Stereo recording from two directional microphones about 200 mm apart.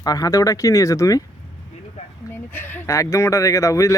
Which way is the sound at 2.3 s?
10° left (ahead or behind).